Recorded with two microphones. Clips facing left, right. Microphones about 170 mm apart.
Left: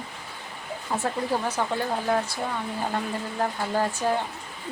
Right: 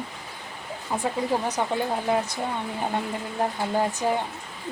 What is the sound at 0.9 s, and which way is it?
Speech, 5° right (ahead or behind).